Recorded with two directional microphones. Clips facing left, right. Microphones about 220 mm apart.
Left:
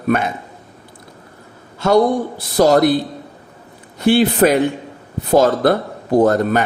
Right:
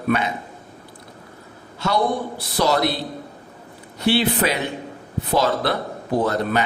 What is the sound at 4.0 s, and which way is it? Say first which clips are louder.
Mantra: left 7 dB; 50° left (ahead or behind).